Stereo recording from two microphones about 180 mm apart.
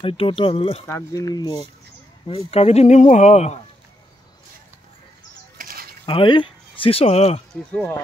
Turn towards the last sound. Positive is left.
turn(degrees=10)  # may be behind; listen again after turning